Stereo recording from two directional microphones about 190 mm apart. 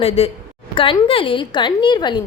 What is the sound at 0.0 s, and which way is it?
A woman's voice, 30° left (ahead or behind).